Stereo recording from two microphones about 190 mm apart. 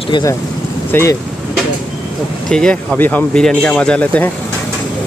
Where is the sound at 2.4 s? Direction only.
5° left (ahead or behind).